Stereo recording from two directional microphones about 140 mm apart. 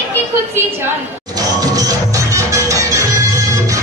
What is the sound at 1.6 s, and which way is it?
Music, 25° right (ahead or behind).